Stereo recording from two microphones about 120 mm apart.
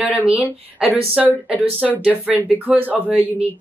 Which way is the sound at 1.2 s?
5° right (ahead or behind).